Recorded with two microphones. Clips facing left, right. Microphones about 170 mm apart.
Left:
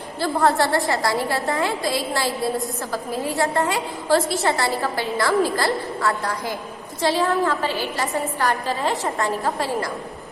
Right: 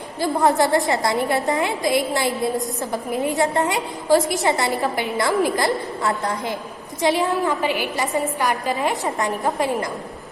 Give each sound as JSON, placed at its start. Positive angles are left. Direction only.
{"t": 0.2, "sound": "a woman's voice", "side_deg": -15}